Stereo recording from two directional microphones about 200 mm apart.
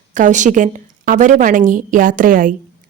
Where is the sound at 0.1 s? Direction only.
40° right (ahead or behind).